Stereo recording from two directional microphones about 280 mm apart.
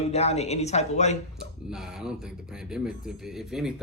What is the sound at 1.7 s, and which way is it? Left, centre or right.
Speech, centre.